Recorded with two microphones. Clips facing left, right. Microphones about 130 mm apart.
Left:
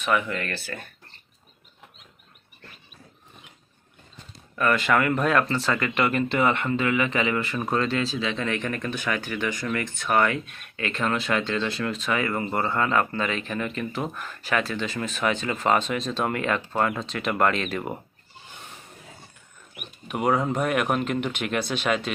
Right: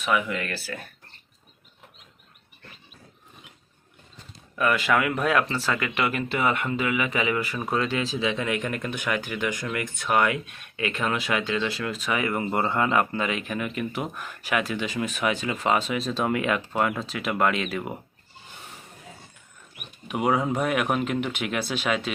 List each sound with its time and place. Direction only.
0.0 s speech: 5° right (ahead or behind)
4.5 s speech: 5° right (ahead or behind)
20.1 s speech: centre (ahead or behind)